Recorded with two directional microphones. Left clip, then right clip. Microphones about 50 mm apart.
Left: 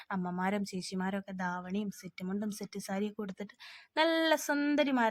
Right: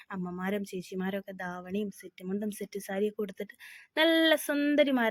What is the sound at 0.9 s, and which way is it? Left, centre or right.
A woman's voice, centre.